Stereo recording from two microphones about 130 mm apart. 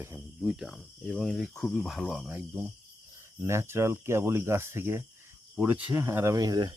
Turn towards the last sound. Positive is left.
turn(degrees=-30)  # may be behind; listen again after turning